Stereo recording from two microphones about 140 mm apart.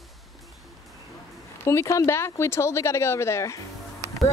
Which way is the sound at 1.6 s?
20° left (ahead or behind).